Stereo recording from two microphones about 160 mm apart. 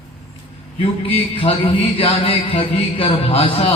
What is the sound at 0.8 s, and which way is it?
A man's voice, 35° left (ahead or behind).